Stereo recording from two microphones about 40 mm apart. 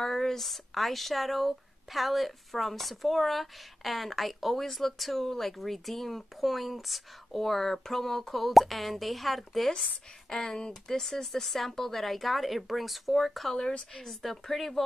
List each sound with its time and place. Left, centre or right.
0.0 s speech: centre
10.3 s speech: centre
13.5 s speech: centre
13.9 s speech: centre